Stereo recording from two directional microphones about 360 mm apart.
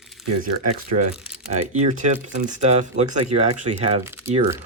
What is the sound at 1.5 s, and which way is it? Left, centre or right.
Speech, centre.